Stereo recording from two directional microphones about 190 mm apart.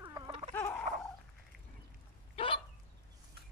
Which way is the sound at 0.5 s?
10° left (ahead or behind).